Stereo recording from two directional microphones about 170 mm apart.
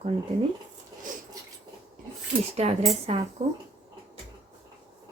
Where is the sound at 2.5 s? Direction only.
40° right (ahead or behind).